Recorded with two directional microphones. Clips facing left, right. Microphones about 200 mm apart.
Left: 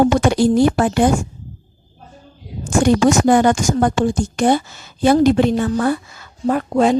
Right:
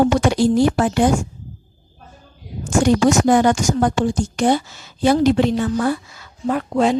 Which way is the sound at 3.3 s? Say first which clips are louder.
Left 1 dB; 50° left (ahead or behind).